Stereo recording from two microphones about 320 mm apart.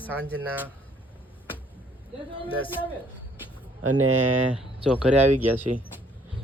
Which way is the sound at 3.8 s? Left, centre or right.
Right.